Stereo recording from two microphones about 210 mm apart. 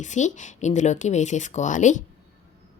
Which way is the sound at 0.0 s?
35° left (ahead or behind).